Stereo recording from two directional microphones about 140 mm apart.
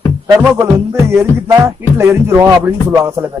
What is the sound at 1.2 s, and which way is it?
A man's voice, 20° right (ahead or behind).